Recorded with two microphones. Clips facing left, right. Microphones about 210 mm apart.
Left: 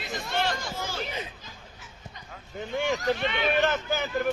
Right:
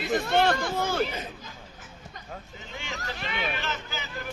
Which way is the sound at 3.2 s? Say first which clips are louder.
Left 5 dB; centre (ahead or behind).